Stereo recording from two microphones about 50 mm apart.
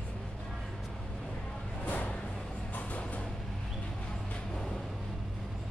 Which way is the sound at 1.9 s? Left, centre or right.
Left.